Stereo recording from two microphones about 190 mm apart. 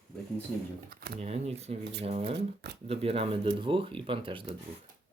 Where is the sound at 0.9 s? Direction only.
55° right (ahead or behind).